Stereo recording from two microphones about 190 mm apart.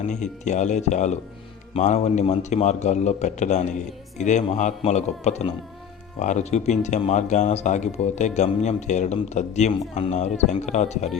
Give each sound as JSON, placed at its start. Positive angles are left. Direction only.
{"t": 0.1, "sound": "speech", "side_deg": 40}